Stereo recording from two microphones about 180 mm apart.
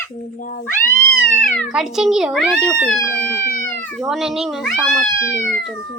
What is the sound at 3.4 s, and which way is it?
Speech, 50° left (ahead or behind).